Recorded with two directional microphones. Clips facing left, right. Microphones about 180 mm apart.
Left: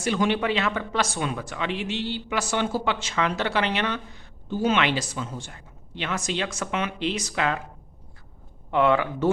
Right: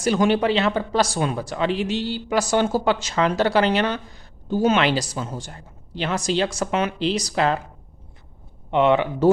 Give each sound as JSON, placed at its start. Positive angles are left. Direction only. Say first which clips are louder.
{"t": 0.0, "sound": "a man's voice", "louder": "right 5 dB", "side_deg": -40}
{"t": 8.7, "sound": "speech", "louder": "right 3 dB", "side_deg": -20}